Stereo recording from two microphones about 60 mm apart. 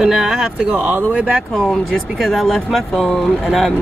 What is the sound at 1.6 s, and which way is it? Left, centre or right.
Speech, centre.